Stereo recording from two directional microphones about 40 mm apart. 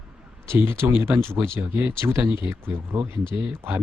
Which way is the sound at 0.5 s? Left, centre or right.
Right.